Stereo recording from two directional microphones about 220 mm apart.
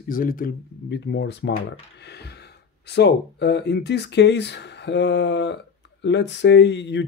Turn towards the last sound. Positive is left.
turn(degrees=55)  # may be behind; listen again after turning